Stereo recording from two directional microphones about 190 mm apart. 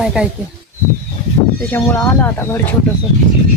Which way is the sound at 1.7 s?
15° left (ahead or behind).